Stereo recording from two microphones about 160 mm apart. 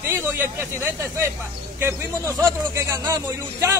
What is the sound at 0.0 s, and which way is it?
A man's voice, 15° right (ahead or behind).